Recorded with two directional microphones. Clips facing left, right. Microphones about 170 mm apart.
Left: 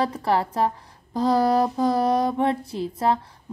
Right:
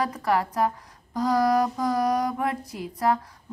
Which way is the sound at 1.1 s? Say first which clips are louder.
Left 2 dB; 30° left (ahead or behind).